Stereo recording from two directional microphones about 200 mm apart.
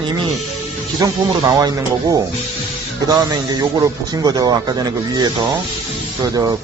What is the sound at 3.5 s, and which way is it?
Speech, 20° right (ahead or behind).